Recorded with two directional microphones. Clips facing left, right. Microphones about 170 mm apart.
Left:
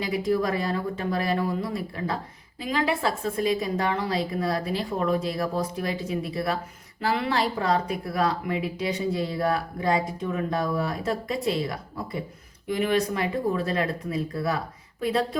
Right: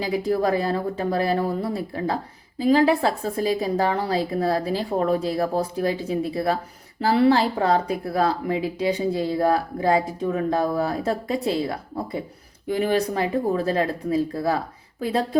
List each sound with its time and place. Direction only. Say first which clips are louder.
0.0 s speech: right 3 dB; 35° right (ahead or behind)